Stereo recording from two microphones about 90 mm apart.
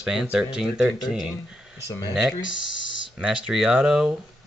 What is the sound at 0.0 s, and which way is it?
Speech, 10° right (ahead or behind).